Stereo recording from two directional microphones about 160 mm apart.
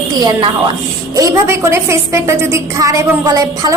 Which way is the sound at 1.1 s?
20° right (ahead or behind).